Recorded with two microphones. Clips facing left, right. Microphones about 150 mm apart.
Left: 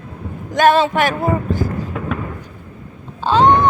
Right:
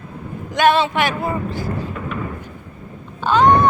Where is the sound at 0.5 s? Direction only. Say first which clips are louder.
Left 2 dB; 45° left (ahead or behind).